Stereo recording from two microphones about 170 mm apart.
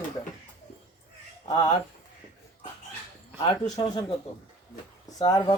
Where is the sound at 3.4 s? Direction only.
25° left (ahead or behind).